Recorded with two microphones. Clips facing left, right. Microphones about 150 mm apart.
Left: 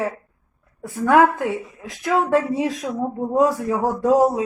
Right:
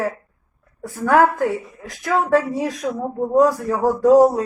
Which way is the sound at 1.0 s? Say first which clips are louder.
Even; 20° left (ahead or behind).